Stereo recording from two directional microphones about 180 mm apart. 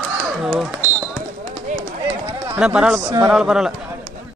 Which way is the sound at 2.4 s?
10° right (ahead or behind).